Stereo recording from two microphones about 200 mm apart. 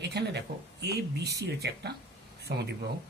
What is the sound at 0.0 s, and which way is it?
Speech, 55° right (ahead or behind).